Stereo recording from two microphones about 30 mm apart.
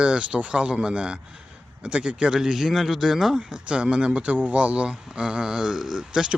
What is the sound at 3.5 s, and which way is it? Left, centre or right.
Speech, right.